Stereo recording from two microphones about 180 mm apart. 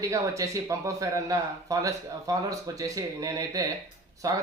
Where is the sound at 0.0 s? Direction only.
20° right (ahead or behind).